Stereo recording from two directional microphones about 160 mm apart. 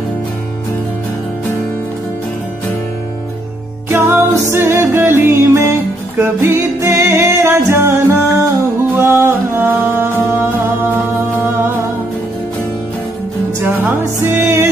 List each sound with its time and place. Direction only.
3.9 s music: 15° right (ahead or behind)
13.6 s music: 15° right (ahead or behind)